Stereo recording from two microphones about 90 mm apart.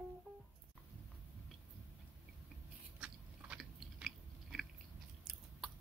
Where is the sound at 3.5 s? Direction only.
Centre (ahead or behind).